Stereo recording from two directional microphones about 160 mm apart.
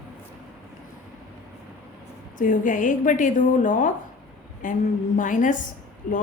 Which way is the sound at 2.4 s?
55° left (ahead or behind).